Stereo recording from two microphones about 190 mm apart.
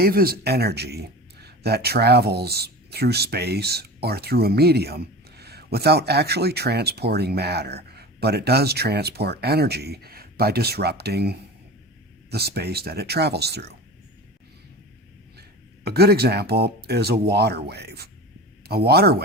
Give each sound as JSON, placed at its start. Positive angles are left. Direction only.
{"t": 0.0, "sound": "speech", "side_deg": -55}
{"t": 15.4, "sound": "speech", "side_deg": -55}